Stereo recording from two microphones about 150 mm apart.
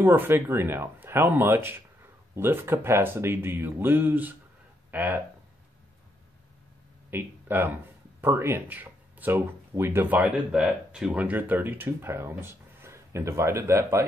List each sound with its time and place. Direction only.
0.0 s speech: 15° right (ahead or behind)
7.1 s speech: 15° right (ahead or behind)